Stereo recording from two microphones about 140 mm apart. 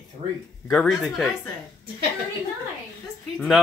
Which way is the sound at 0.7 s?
Centre (ahead or behind).